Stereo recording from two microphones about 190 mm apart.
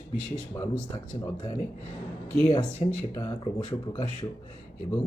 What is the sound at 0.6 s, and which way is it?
Speech, 15° left (ahead or behind).